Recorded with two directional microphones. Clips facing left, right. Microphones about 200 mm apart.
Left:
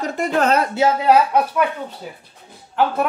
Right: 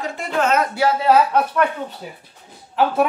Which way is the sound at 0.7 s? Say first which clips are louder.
Left 1 dB; 15° left (ahead or behind).